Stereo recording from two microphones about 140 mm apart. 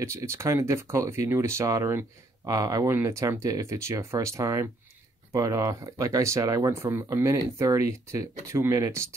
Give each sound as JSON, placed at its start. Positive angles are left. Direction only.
{"t": 0.0, "sound": "speech", "side_deg": -20}